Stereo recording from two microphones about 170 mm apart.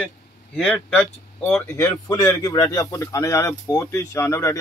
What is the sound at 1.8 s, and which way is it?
Speech, 25° left (ahead or behind).